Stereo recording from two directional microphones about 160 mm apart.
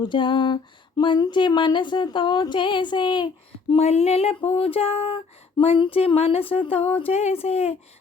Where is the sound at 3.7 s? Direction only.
40° left (ahead or behind).